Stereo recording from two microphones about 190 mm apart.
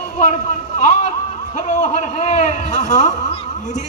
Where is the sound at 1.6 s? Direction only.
40° left (ahead or behind).